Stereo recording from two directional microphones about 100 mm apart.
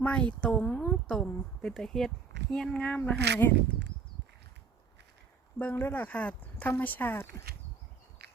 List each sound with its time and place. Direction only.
0.0 s speech: 15° left (ahead or behind)
5.5 s speech: 15° left (ahead or behind)